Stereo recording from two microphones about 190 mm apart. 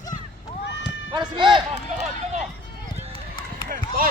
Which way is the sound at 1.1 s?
25° right (ahead or behind).